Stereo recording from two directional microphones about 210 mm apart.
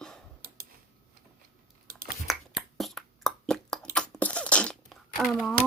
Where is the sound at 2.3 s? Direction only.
Centre (ahead or behind).